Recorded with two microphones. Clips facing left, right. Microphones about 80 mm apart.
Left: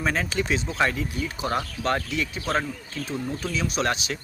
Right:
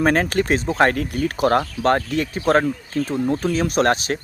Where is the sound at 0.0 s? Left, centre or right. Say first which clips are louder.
Right 8 dB; right.